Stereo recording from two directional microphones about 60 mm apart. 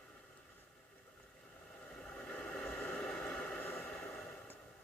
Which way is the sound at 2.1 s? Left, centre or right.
Centre.